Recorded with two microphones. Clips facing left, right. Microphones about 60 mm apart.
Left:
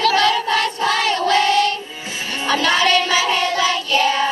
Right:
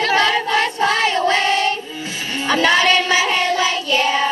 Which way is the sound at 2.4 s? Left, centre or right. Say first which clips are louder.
Right 2 dB; right.